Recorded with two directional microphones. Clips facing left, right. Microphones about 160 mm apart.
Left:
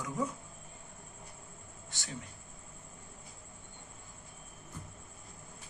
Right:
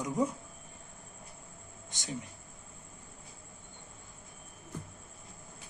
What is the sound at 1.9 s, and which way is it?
Speech, 20° right (ahead or behind).